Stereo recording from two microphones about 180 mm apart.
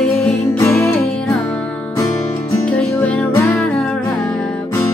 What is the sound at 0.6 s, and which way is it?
Music, 15° left (ahead or behind).